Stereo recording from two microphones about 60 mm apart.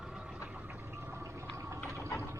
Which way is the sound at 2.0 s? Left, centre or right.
Left.